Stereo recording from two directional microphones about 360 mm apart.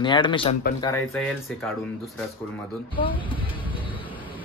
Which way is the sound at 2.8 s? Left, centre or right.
Centre.